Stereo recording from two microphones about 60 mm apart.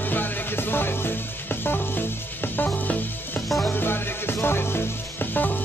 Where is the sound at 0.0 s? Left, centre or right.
Left.